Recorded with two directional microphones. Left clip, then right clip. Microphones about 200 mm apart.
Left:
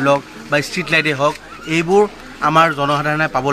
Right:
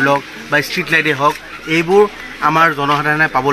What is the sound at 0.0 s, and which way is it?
Speech, 30° left (ahead or behind).